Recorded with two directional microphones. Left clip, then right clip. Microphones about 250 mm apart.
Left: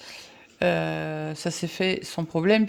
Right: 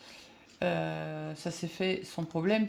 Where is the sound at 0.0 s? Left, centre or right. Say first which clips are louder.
Left 9 dB; left.